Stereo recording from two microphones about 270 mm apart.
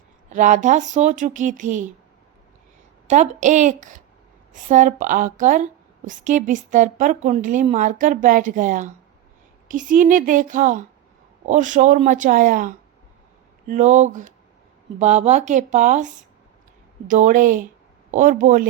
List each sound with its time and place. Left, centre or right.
0.3 s a woman's voice: right
3.1 s a woman's voice: right
17.1 s a woman's voice: right